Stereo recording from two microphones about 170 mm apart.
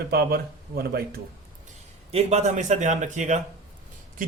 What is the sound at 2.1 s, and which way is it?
A man's voice, 40° right (ahead or behind).